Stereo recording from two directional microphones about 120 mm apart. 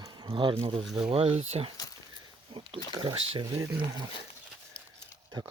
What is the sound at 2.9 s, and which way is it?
Speech, 40° right (ahead or behind).